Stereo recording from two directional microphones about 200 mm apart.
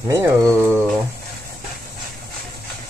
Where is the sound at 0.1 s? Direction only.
15° right (ahead or behind).